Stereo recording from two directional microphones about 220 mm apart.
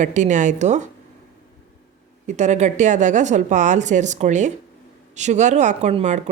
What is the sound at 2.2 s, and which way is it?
Speech, 30° right (ahead or behind).